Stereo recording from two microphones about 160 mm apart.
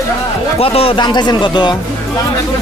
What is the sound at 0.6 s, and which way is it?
Speech, 35° left (ahead or behind).